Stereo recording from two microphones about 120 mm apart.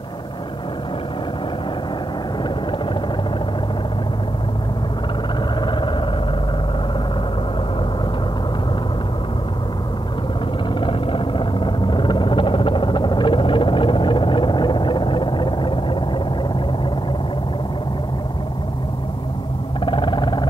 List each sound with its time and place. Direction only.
5.6 s vehicle: 40° left (ahead or behind)
10.8 s vehicle: 45° left (ahead or behind)
19.8 s a sound: 45° left (ahead or behind)